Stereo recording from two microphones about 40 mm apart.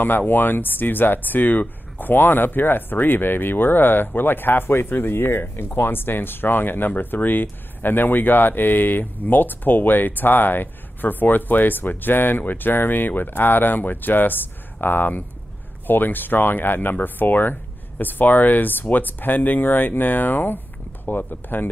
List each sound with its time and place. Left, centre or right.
0.3 s speech: left
4.8 s speech: left